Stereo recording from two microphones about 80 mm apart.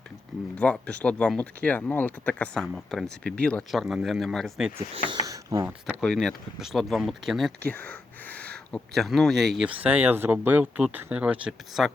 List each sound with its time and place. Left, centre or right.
0.5 s speech: centre
2.6 s speech: centre
3.7 s speech: centre
5.2 s a sound: right
6.0 s speech: centre
7.6 s speech: centre
9.0 s speech: centre
9.6 s speech: centre
11.8 s speech: centre